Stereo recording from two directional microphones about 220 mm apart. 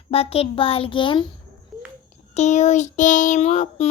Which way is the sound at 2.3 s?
30° left (ahead or behind).